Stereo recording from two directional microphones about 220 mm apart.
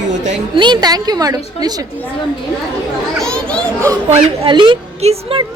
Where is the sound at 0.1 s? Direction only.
35° right (ahead or behind).